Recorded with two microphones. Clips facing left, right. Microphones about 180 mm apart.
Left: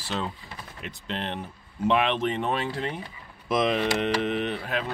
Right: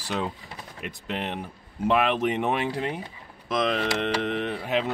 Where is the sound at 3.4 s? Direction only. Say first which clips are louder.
Left 1 dB; 5° left (ahead or behind).